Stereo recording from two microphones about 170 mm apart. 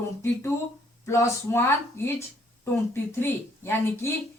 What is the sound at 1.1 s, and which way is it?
A woman's voice, 15° left (ahead or behind).